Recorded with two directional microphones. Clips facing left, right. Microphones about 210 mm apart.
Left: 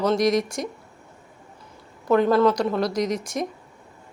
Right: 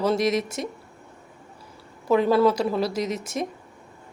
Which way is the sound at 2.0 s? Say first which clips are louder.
Left 1 dB; 5° right (ahead or behind).